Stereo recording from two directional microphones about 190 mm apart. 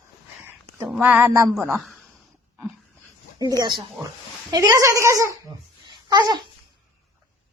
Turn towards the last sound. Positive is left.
turn(degrees=-25)  # may be behind; listen again after turning